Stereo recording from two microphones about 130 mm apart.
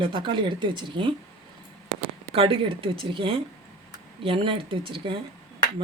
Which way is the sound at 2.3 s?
45° right (ahead or behind).